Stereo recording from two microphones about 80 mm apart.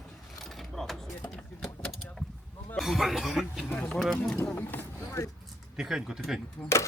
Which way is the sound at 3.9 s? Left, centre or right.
Centre.